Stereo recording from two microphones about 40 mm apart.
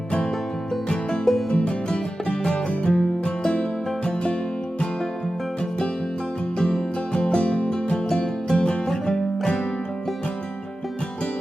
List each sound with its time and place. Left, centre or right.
0.9 s music: centre
6.6 s music: centre
8.9 s music: centre